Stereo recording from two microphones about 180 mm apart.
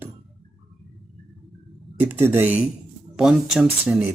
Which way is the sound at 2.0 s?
15° right (ahead or behind).